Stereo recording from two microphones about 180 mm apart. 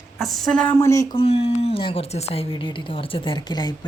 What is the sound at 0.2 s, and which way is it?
Speech, centre (ahead or behind).